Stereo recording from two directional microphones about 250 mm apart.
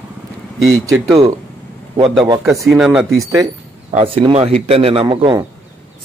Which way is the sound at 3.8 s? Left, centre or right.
Right.